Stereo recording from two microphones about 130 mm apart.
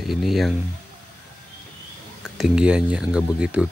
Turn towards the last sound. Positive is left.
turn(degrees=-10)  # may be behind; listen again after turning